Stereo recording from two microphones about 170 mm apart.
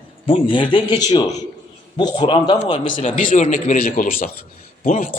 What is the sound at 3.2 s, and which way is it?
A man's voice, 50° left (ahead or behind).